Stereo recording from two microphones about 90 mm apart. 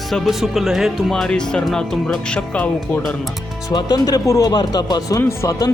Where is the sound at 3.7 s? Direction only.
50° left (ahead or behind).